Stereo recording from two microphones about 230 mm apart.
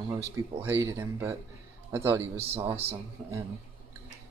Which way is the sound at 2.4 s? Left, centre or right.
Right.